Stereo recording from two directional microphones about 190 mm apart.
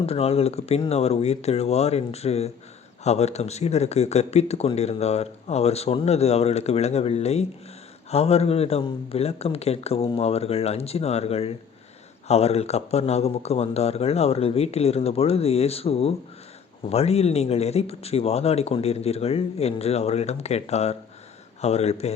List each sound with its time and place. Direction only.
0.0 s speech: 30° left (ahead or behind)